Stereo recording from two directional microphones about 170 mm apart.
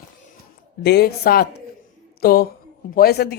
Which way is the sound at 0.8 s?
75° left (ahead or behind).